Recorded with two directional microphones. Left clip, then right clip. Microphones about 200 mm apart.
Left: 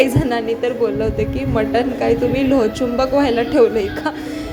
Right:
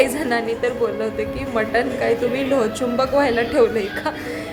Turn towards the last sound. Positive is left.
turn(degrees=15)  # may be behind; listen again after turning